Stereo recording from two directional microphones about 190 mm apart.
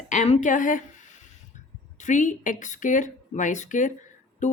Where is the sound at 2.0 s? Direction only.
40° left (ahead or behind).